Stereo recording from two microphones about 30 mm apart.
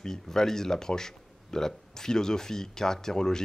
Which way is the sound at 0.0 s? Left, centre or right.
Centre.